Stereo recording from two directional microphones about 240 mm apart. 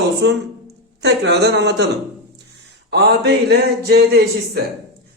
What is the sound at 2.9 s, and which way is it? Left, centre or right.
A man's voice, right.